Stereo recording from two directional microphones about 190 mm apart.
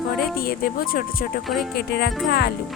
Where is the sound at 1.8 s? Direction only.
55° left (ahead or behind).